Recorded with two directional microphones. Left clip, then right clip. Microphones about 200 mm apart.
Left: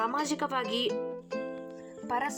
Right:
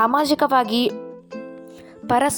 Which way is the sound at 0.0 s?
45° right (ahead or behind).